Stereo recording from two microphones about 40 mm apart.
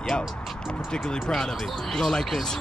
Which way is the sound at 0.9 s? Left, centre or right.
Centre.